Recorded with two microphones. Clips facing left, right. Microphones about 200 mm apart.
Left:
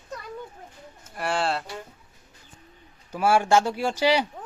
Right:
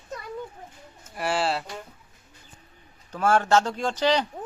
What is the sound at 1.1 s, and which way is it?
Speech, centre (ahead or behind).